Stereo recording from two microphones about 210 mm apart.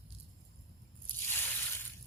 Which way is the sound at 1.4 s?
10° left (ahead or behind).